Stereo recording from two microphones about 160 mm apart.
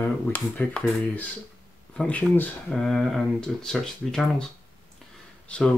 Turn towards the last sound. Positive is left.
turn(degrees=5)  # may be behind; listen again after turning